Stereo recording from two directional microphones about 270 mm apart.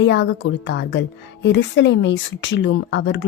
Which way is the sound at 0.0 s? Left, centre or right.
Left.